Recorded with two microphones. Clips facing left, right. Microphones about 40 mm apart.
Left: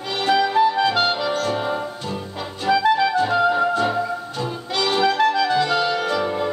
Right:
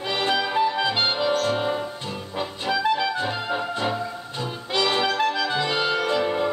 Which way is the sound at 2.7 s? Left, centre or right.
Centre.